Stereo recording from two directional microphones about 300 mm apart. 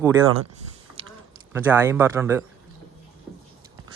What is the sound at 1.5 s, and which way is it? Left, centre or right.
Speech, centre.